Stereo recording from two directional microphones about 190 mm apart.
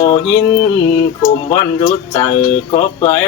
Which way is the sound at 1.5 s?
25° left (ahead or behind).